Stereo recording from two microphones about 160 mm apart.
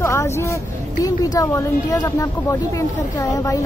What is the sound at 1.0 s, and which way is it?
Speech, 20° left (ahead or behind).